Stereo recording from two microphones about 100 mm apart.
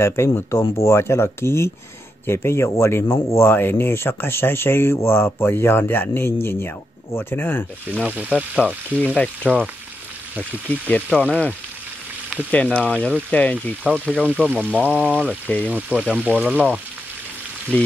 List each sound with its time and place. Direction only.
0.0 s speech: 25° left (ahead or behind)
7.9 s speech: 15° right (ahead or behind)
8.9 s speech: 10° left (ahead or behind)
10.7 s speech: 10° left (ahead or behind)
12.4 s speech: 10° left (ahead or behind)
14.2 s speech: 15° right (ahead or behind)
15.4 s speech: 10° left (ahead or behind)
15.7 s speech: 15° right (ahead or behind)
17.7 s speech: 15° left (ahead or behind)